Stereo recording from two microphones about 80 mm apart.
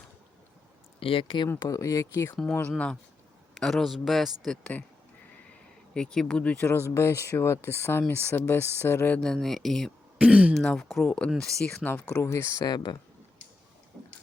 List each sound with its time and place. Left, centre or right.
1.2 s speech: left
1.5 s speech: left
2.3 s speech: centre
3.6 s speech: centre
4.6 s speech: centre
5.5 s a sound: centre
6.6 s speech: left
9.1 s speech: centre
10.2 s speech: centre
10.8 s speech: centre
11.0 s speech: centre
12.2 s speech: left
12.6 s speech: left